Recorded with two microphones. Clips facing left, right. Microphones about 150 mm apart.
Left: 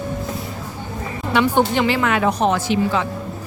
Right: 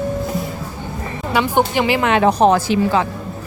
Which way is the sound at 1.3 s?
5° right (ahead or behind).